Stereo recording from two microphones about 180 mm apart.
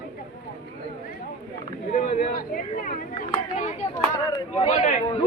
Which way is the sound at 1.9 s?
45° left (ahead or behind).